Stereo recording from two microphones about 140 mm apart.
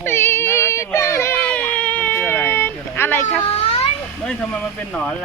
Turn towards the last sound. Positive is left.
turn(degrees=5)  # may be behind; listen again after turning